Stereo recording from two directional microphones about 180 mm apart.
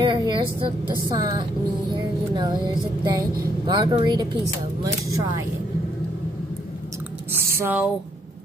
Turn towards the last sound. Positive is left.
turn(degrees=-10)  # may be behind; listen again after turning